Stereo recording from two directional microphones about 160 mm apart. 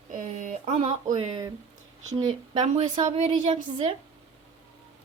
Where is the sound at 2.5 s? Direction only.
45° right (ahead or behind).